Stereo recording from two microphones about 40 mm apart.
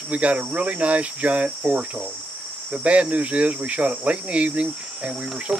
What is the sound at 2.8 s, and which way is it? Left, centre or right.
Speech, right.